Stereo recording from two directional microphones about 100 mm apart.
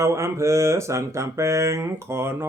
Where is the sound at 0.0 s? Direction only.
30° right (ahead or behind).